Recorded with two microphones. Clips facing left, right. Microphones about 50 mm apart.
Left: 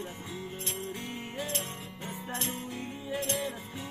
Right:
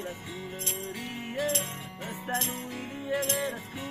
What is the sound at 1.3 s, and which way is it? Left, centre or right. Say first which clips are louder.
Music: right 7 dB; right.